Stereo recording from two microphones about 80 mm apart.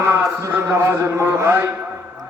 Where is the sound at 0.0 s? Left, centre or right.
Right.